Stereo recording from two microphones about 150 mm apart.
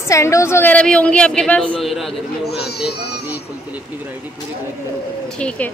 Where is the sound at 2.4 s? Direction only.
90° left.